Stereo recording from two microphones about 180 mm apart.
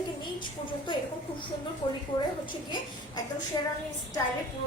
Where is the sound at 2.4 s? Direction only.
25° left (ahead or behind).